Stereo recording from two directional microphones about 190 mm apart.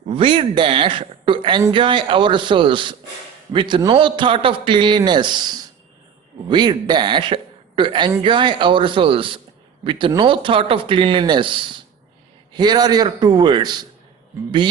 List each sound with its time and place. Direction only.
0.1 s a man's voice: 25° right (ahead or behind)